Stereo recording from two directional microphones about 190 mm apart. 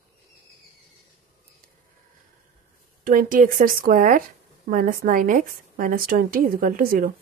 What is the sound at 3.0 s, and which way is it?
A woman's voice, 45° right (ahead or behind).